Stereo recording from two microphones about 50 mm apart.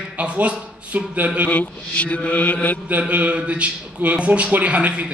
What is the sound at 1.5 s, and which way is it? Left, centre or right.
Mantra, left.